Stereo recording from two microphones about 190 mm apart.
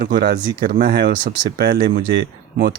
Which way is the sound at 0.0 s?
50° right (ahead or behind).